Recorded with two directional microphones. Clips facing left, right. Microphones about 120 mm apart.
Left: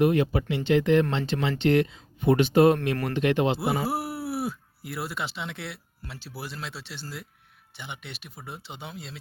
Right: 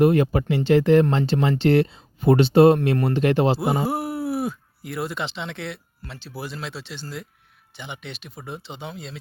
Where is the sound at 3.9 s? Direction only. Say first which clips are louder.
Right 5 dB; 5° left (ahead or behind).